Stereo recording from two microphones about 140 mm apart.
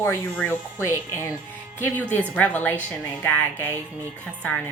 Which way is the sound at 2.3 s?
15° left (ahead or behind).